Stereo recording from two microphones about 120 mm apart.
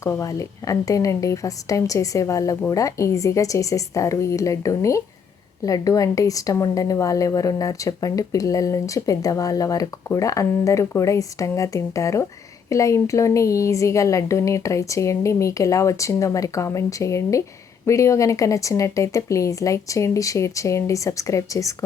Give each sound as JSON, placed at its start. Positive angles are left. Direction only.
{"t": 0.0, "sound": "a woman's voice", "side_deg": 25}